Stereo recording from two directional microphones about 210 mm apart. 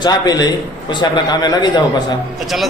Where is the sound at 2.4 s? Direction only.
Centre (ahead or behind).